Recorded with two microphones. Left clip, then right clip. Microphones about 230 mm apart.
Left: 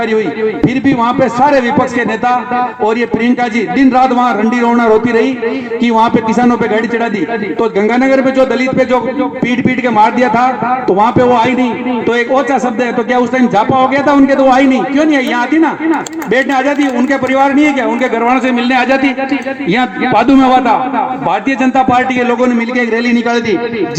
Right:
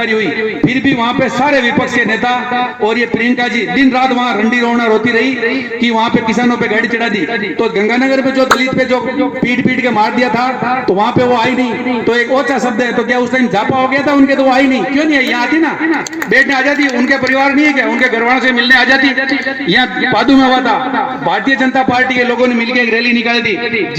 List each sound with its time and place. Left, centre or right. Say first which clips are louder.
0.6 s a man's voice: left 1 dB; left
3.8 s a man's voice: left 3 dB; left